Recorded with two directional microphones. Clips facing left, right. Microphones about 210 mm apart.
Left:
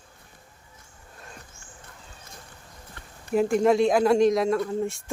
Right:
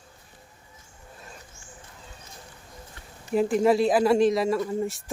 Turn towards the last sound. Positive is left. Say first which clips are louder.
# left 1 dB
turn(degrees=-5)  # may be behind; listen again after turning